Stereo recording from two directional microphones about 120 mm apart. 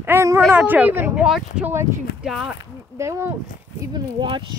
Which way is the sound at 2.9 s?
25° right (ahead or behind).